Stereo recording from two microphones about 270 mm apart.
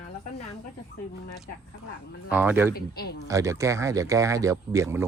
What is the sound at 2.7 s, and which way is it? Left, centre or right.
Speech, left.